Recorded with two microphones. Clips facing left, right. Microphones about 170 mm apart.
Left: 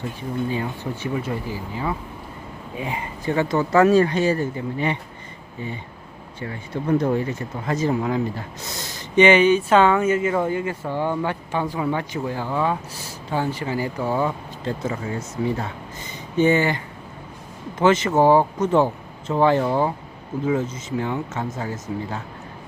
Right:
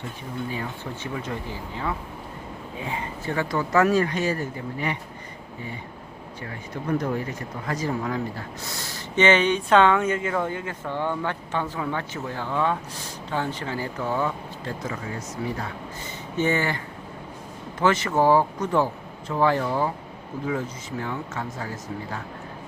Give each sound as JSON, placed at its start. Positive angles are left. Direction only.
{"t": 1.0, "sound": "speech", "side_deg": 10}
{"t": 7.0, "sound": "speech", "side_deg": 25}